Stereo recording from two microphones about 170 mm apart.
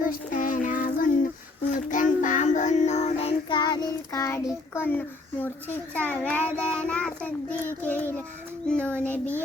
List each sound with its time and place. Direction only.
0.3 s child singing: 50° left (ahead or behind); by 3.6 s 35° left (ahead or behind)
3.6 s child singing: 25° left (ahead or behind)